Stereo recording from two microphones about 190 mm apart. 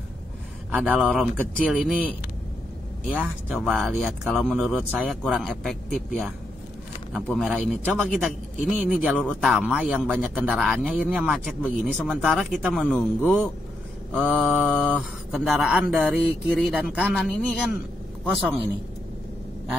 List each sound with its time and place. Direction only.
0.7 s a man's voice: 10° right (ahead or behind)
10.5 s speech: 5° left (ahead or behind)
18.2 s a man's voice: 10° right (ahead or behind)